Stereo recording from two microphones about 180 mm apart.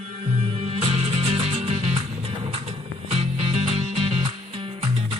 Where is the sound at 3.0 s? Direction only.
35° right (ahead or behind).